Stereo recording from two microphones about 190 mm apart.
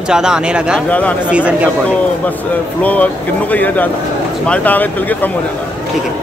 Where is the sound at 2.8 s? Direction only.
10° left (ahead or behind).